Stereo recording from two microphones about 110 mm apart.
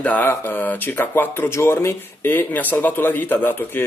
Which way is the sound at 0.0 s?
15° left (ahead or behind).